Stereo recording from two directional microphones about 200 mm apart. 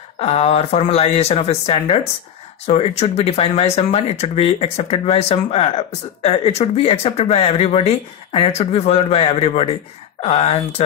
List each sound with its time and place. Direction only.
0.2 s speech: 30° left (ahead or behind)